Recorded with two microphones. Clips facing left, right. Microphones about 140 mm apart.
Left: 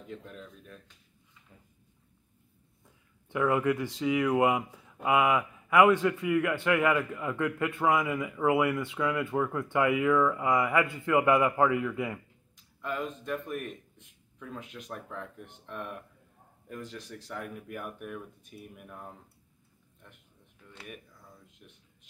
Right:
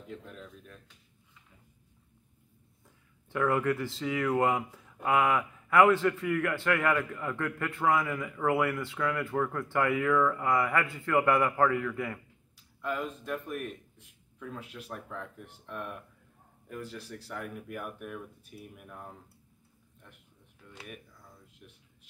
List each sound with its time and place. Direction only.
0.2 s a man's voice: centre (ahead or behind)
3.3 s speech: 15° left (ahead or behind)
12.8 s a man's voice: 5° right (ahead or behind)